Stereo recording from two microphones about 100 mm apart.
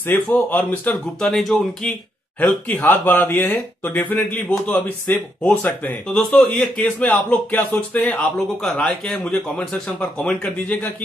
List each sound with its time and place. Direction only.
0.0 s a man's voice: 20° left (ahead or behind)
1.2 s speech: centre (ahead or behind)
2.4 s speech: 15° left (ahead or behind)
6.0 s speech: 5° left (ahead or behind)
6.8 s speech: 15° left (ahead or behind)
8.6 s speech: 5° left (ahead or behind)